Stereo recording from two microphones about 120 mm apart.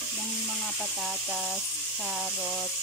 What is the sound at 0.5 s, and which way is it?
Speech, 5° right (ahead or behind).